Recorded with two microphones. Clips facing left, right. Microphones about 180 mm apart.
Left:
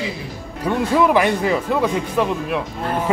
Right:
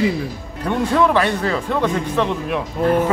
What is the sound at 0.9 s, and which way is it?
Speech, 10° left (ahead or behind).